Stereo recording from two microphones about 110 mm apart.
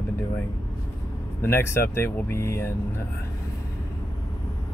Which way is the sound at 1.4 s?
20° left (ahead or behind).